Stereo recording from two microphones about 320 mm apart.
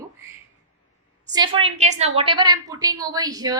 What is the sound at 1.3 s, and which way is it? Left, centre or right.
A woman's voice, centre.